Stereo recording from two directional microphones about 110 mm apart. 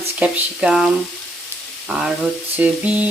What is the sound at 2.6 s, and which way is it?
Speech, 15° right (ahead or behind).